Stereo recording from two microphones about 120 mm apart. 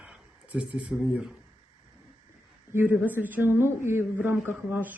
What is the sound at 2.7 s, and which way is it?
Speech, 15° right (ahead or behind).